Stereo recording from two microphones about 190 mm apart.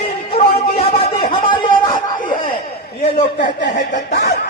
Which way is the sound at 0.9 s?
30° left (ahead or behind).